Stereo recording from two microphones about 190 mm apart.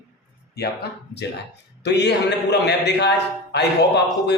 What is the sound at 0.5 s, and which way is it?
A man's voice, 60° left (ahead or behind).